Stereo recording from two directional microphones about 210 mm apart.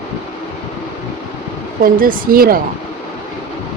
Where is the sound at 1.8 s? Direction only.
40° right (ahead or behind).